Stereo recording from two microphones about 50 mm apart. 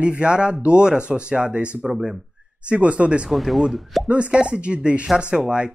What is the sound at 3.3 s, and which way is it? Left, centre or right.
Speech, centre.